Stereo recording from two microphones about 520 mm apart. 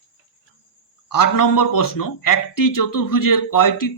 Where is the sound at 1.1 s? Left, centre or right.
Left.